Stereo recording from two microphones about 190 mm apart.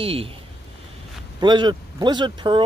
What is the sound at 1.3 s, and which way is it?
Speech, 20° right (ahead or behind).